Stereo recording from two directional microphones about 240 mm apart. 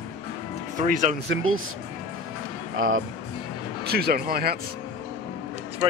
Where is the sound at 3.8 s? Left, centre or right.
Right.